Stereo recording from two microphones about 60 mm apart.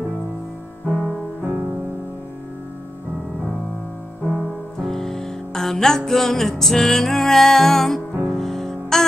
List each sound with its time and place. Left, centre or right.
0.8 s music: centre
1.4 s music: right
4.3 s music: centre